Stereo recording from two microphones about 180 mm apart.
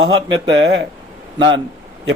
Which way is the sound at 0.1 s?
25° right (ahead or behind).